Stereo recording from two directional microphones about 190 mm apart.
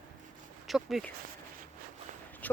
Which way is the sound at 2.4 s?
10° left (ahead or behind).